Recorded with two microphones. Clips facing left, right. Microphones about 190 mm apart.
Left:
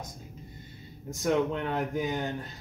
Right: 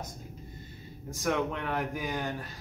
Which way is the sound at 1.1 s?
25° left (ahead or behind).